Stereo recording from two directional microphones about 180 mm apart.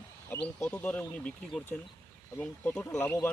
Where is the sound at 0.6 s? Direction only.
5° left (ahead or behind).